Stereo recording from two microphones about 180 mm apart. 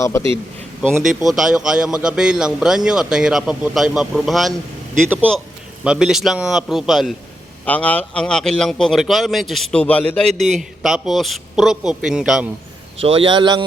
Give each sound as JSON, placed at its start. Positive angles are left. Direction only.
{"t": 0.0, "sound": "a man's voice", "side_deg": 15}
{"t": 1.2, "sound": "a man's voice", "side_deg": 0}
{"t": 5.8, "sound": "a man's voice", "side_deg": -5}
{"t": 13.0, "sound": "speech", "side_deg": -30}